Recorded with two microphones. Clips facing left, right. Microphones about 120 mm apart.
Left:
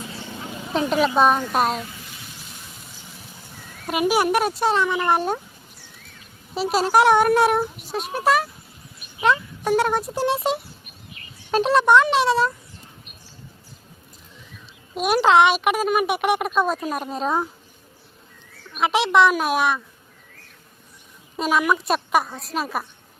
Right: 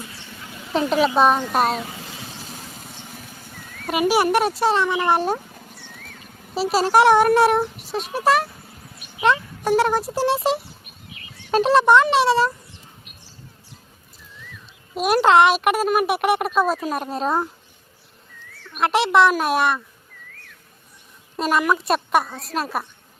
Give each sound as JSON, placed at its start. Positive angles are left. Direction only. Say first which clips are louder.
{"t": 0.1, "sound": "a sound", "louder": "left 6 dB", "side_deg": 25}
{"t": 0.7, "sound": "speech", "louder": "right 1 dB", "side_deg": 0}
{"t": 1.9, "sound": "a sound", "louder": "right 5 dB", "side_deg": -90}
{"t": 2.5, "sound": "vehicle", "louder": "right 5 dB", "side_deg": -40}
{"t": 3.8, "sound": "speech", "louder": "right 1 dB", "side_deg": 0}
{"t": 5.5, "sound": "a sound", "louder": "right 6 dB", "side_deg": -75}
{"t": 6.5, "sound": "speech", "louder": "right 1 dB", "side_deg": 0}
{"t": 14.9, "sound": "speech", "louder": "right 1 dB", "side_deg": 0}
{"t": 18.8, "sound": "speech", "louder": "right 1 dB", "side_deg": 0}
{"t": 21.3, "sound": "speech", "louder": "right 1 dB", "side_deg": 0}